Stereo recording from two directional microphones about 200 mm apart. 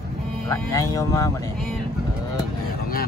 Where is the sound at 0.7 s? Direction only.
15° left (ahead or behind).